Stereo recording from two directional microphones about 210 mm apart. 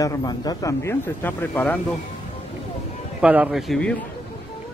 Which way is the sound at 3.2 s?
5° right (ahead or behind).